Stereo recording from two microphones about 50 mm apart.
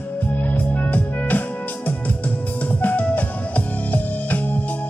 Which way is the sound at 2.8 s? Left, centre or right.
Left.